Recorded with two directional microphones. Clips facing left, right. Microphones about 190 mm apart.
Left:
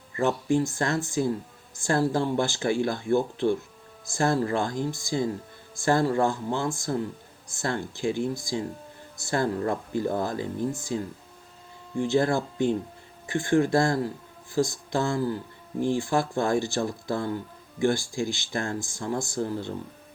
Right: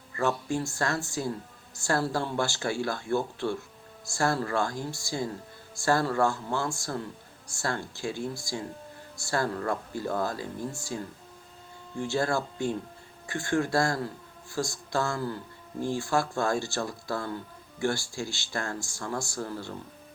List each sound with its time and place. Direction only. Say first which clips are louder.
0.2 s speech: left 5 dB; 15° left (ahead or behind)